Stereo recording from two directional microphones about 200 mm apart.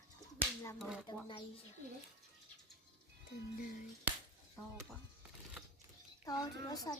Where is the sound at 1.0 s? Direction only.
20° left (ahead or behind).